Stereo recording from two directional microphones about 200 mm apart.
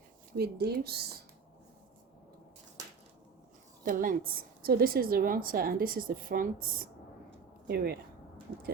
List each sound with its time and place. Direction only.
0.3 s a woman's voice: 50° right (ahead or behind)
3.8 s a woman's voice: 45° right (ahead or behind)